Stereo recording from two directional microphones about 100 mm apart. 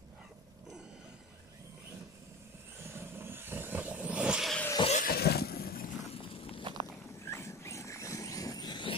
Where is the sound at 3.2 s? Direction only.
20° right (ahead or behind).